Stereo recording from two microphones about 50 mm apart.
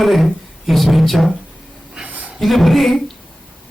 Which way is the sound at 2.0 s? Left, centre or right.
Right.